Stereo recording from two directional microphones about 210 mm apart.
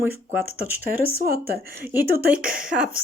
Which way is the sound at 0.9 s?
45° right (ahead or behind).